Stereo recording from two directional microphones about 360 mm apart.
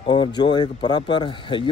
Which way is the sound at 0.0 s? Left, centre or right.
Centre.